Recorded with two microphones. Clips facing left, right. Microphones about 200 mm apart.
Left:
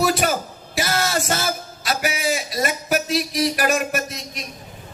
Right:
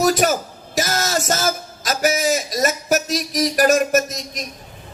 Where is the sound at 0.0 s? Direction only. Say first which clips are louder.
Right 3 dB; 40° right (ahead or behind).